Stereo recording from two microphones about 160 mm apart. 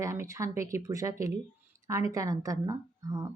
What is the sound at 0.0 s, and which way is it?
A woman's voice, 20° right (ahead or behind).